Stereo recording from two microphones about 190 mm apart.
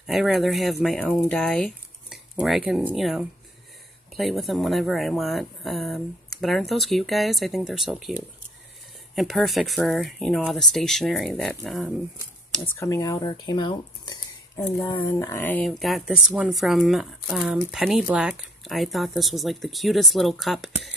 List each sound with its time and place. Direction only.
0.0 s speech: centre (ahead or behind)
12.6 s speech: 15° left (ahead or behind)